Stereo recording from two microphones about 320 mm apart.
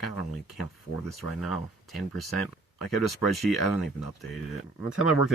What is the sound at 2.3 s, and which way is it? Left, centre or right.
Speech, left.